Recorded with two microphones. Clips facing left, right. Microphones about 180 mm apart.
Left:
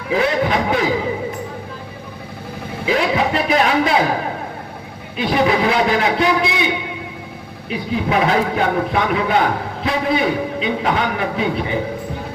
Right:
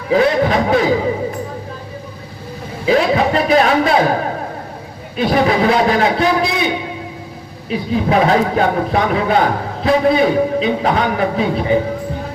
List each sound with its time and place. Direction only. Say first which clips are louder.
0.1 s a man's voice: right 4 dB; 35° right (ahead or behind)
2.8 s a man's voice: right 4 dB; 35° right (ahead or behind)
5.1 s a man's voice: right 2 dB; 40° right (ahead or behind)
7.7 s a man's voice: right 4 dB; 35° right (ahead or behind)